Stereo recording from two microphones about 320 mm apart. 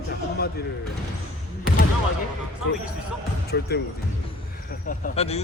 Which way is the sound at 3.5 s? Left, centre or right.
Left.